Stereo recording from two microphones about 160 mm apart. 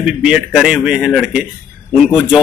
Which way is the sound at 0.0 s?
5° right (ahead or behind).